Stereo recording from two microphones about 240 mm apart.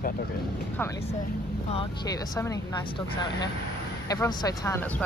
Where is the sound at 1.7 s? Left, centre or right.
Centre.